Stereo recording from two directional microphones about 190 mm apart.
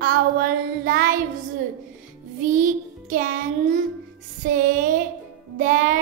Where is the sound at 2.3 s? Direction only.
45° right (ahead or behind).